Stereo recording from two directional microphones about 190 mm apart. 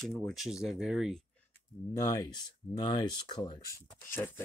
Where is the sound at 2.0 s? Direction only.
20° left (ahead or behind).